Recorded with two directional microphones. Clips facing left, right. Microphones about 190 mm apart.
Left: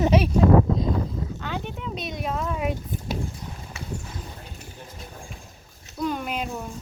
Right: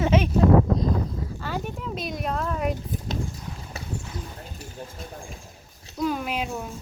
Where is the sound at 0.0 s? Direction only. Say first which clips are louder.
Left 1 dB; 35° left (ahead or behind).